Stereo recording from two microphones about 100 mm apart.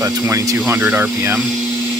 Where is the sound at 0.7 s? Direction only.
15° right (ahead or behind).